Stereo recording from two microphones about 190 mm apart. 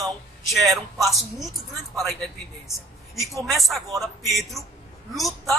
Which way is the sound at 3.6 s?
Centre (ahead or behind).